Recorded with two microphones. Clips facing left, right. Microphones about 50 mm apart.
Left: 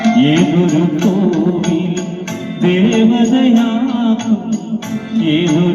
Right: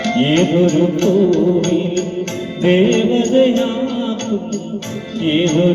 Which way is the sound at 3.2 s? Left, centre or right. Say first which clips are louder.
Left 2 dB; left.